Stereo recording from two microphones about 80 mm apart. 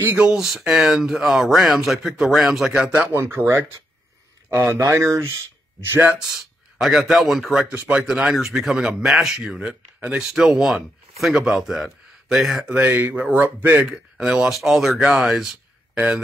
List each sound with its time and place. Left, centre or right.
0.2 s speech: centre
3.2 s speech: right
6.1 s speech: centre
12.7 s speech: centre
14.1 s speech: centre